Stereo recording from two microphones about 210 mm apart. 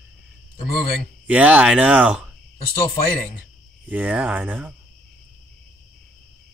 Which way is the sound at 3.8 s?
5° right (ahead or behind).